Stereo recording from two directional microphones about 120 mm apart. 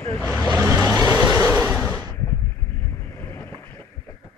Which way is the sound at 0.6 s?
20° right (ahead or behind).